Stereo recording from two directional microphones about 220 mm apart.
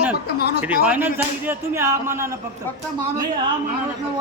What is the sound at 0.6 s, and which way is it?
Speech, 5° right (ahead or behind).